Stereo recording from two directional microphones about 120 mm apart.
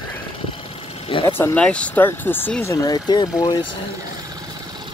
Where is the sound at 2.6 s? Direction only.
30° left (ahead or behind).